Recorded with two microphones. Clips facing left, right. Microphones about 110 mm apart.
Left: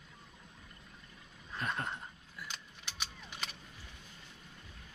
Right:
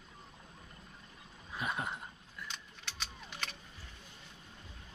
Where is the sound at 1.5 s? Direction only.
10° right (ahead or behind).